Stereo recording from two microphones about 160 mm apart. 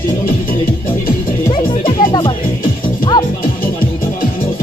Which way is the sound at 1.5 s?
30° left (ahead or behind).